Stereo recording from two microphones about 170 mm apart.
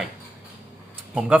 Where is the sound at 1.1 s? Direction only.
5° right (ahead or behind).